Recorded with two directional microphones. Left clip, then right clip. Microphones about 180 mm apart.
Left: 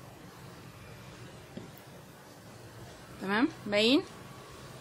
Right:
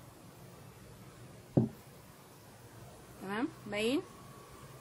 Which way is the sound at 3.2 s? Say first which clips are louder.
Left 8 dB; 25° left (ahead or behind).